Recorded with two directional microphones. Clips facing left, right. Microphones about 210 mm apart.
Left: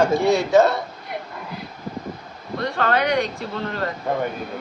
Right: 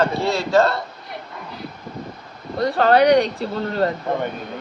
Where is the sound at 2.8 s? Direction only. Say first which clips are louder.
Right 7 dB; 35° right (ahead or behind).